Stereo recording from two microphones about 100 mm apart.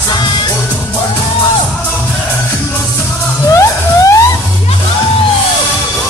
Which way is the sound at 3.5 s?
35° left (ahead or behind).